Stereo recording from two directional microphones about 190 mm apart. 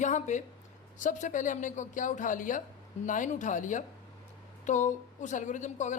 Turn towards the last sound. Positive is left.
turn(degrees=40)  # may be behind; listen again after turning